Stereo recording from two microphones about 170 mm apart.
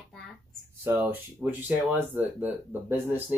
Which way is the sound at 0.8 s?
15° right (ahead or behind).